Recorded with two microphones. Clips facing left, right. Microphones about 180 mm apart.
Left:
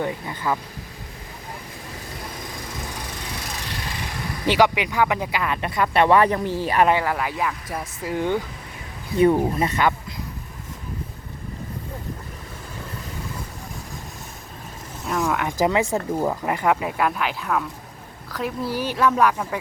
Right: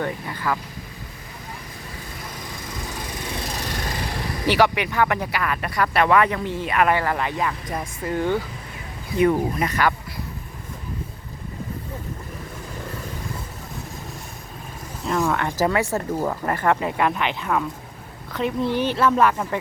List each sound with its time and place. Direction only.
0.0 s speech: 20° left (ahead or behind)
4.4 s speech: 15° left (ahead or behind); by 6.8 s 35° left (ahead or behind)
6.8 s speech: 15° left (ahead or behind)
7.1 s speech: 5° left (ahead or behind)
9.1 s speech: 30° left (ahead or behind)
15.0 s a sound: centre (ahead or behind)
15.4 s speech: 15° left (ahead or behind); by 19.5 s centre (ahead or behind)